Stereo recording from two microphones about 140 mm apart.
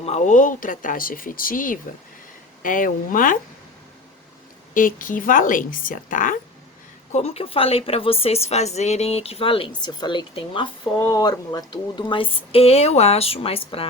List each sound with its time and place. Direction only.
0.0 s speech: 55° left (ahead or behind); by 3.3 s 75° left (ahead or behind)
4.7 s speech: 75° left (ahead or behind)
7.1 s a woman's voice: 45° left (ahead or behind)